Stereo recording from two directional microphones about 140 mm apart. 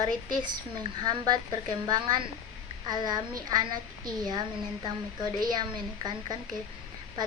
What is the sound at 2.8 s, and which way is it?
A woman's voice, 30° right (ahead or behind).